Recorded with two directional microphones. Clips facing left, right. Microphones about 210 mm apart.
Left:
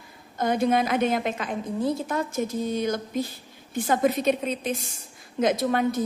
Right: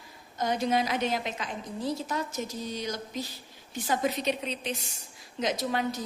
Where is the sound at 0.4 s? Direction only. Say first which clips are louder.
Left 5 dB; 55° left (ahead or behind).